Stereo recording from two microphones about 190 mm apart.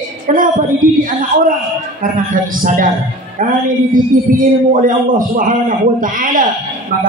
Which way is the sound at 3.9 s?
45° right (ahead or behind).